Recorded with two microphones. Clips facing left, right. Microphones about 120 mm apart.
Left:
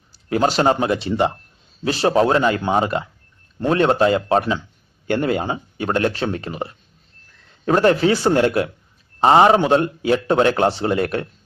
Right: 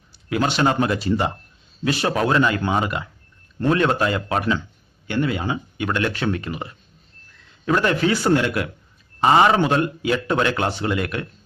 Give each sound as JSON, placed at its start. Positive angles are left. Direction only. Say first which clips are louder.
{"t": 0.1, "sound": "speech", "louder": "left 4 dB", "side_deg": 35}
{"t": 5.0, "sound": "speech", "louder": "left 3 dB", "side_deg": 50}